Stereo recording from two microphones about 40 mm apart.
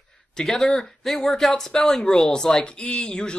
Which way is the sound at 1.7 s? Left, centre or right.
Centre.